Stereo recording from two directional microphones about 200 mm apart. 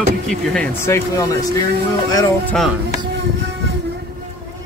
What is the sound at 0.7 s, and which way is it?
Speech, 15° left (ahead or behind).